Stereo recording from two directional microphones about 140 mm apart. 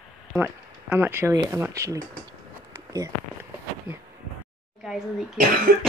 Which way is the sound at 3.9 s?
10° right (ahead or behind).